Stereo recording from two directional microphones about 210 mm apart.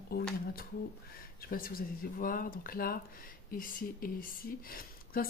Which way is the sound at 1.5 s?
45° left (ahead or behind).